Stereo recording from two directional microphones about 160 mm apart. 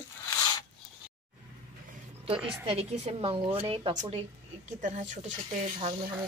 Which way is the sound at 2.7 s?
40° right (ahead or behind).